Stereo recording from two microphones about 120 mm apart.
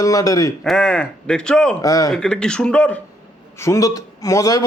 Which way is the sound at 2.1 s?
5° left (ahead or behind).